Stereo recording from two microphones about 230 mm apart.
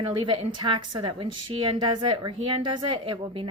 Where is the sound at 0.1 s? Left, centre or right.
Centre.